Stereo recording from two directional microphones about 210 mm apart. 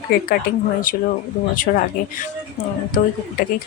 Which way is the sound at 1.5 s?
40° left (ahead or behind).